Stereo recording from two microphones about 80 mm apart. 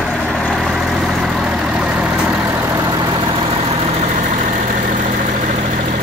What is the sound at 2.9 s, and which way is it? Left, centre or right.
Vehicle, right.